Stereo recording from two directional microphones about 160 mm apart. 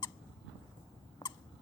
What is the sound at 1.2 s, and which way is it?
Rodents, 20° left (ahead or behind).